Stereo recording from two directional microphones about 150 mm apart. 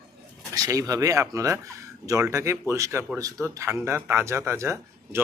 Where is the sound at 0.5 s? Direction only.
25° right (ahead or behind).